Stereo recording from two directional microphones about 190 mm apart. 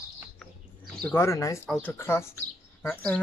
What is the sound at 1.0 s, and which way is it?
Speech, 15° left (ahead or behind).